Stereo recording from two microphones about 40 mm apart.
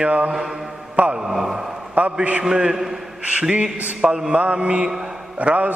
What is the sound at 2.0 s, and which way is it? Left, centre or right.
Speech, right.